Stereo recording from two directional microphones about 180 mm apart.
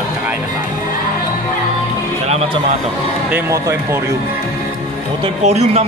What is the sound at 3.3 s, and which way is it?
Speech, 15° right (ahead or behind).